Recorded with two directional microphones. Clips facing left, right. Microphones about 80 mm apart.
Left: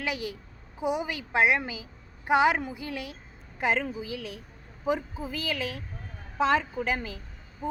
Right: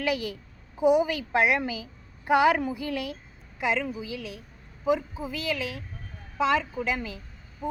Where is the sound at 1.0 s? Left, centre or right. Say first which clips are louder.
Right 1 dB; left.